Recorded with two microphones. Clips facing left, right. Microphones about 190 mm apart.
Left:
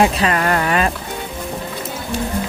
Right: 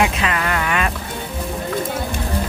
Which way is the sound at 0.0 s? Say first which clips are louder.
Left 4 dB; 40° left (ahead or behind).